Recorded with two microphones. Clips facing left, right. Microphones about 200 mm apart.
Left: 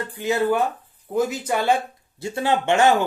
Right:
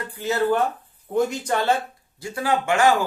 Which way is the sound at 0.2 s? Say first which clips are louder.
Even; 15° left (ahead or behind).